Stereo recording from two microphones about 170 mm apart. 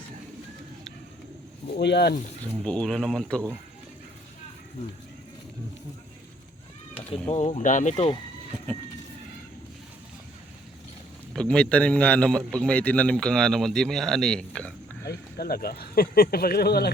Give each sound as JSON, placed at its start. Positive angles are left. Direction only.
{"t": 1.8, "sound": "speech", "side_deg": 80}
{"t": 2.4, "sound": "speech", "side_deg": 5}
{"t": 6.9, "sound": "speech", "side_deg": 35}
{"t": 11.3, "sound": "a man's voice", "side_deg": 5}
{"t": 15.0, "sound": "speech", "side_deg": 70}